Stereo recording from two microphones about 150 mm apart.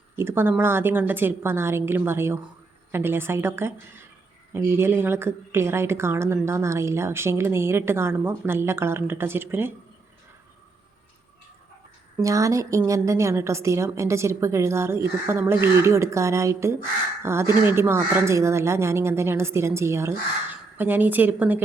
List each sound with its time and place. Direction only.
0.2 s a woman's voice: 15° right (ahead or behind)
12.1 s a woman's voice: 20° right (ahead or behind)